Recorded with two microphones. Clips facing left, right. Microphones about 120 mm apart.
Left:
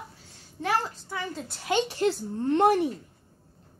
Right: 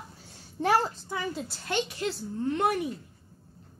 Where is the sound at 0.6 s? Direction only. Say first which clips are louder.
Right 3 dB; 30° right (ahead or behind).